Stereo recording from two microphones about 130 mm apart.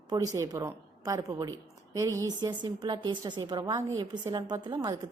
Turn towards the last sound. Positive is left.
turn(degrees=-35)  # may be behind; listen again after turning